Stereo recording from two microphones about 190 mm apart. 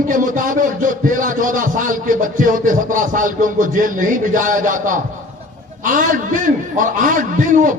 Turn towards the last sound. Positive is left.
turn(degrees=-45)  # may be behind; listen again after turning